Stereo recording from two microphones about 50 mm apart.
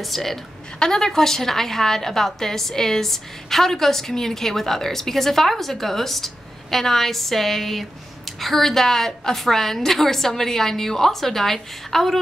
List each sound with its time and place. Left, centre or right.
0.0 s a woman's voice: centre